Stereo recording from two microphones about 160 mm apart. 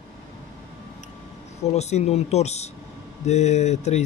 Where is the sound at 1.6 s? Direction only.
45° left (ahead or behind).